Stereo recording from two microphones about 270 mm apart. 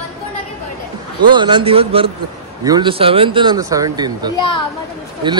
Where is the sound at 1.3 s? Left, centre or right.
Centre.